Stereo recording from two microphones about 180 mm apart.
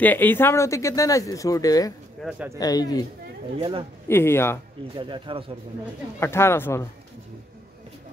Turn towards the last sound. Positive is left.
turn(degrees=15)  # may be behind; listen again after turning